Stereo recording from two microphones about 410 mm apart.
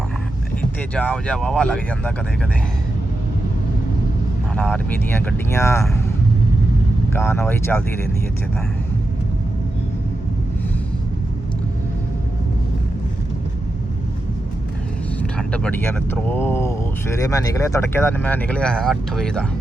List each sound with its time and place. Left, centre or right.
0.9 s speech: centre
4.5 s speech: centre
7.1 s speech: centre
15.2 s speech: centre